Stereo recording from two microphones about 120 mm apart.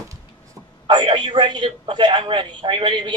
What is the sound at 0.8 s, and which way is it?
A man's voice, 40° right (ahead or behind).